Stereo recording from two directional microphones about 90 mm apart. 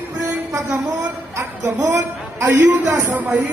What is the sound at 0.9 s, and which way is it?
Speech, 40° right (ahead or behind).